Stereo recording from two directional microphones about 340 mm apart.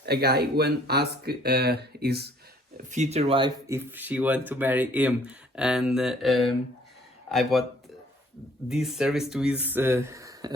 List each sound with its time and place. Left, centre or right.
0.0 s speech: right; by 7.6 s centre
8.7 s speech: centre